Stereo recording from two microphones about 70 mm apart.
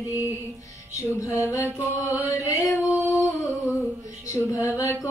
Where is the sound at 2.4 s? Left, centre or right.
Left.